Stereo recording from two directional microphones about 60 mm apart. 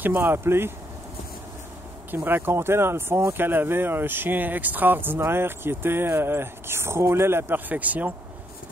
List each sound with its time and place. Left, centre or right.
0.0 s speech: right
2.0 s speech: right
3.3 s speech: right